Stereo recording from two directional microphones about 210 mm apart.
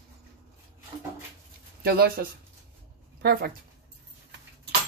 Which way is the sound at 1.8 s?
45° right (ahead or behind).